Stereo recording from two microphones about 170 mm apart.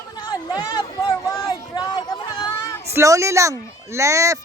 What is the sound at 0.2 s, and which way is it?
Speech, 25° left (ahead or behind).